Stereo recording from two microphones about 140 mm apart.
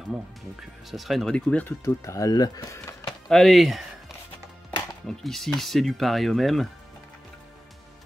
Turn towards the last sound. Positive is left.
turn(degrees=0)  # may be behind; listen again after turning